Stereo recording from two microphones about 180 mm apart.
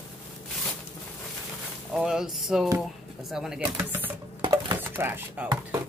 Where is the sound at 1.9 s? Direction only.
5° right (ahead or behind).